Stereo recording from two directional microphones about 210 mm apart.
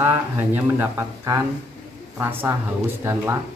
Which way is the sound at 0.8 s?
10° right (ahead or behind).